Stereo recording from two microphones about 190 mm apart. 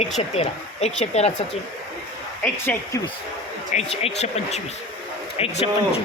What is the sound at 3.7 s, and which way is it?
Speech, 35° left (ahead or behind).